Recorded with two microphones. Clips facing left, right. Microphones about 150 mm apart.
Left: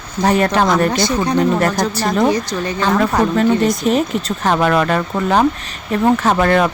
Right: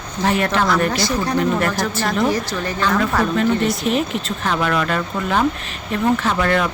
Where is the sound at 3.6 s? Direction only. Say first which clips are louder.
Left 4 dB; 40° left (ahead or behind).